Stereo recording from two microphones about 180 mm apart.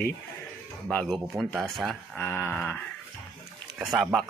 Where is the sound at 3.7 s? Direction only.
Centre (ahead or behind).